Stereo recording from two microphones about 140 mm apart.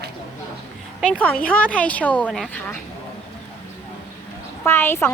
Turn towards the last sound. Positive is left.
turn(degrees=15)  # may be behind; listen again after turning